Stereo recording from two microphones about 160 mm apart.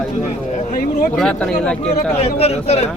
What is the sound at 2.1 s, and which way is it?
Speech, 40° left (ahead or behind).